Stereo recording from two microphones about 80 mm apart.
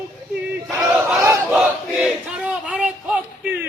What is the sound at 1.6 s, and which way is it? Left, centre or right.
Battle cry, centre.